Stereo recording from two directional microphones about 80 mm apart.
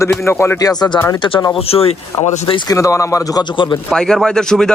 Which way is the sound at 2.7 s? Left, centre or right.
Left.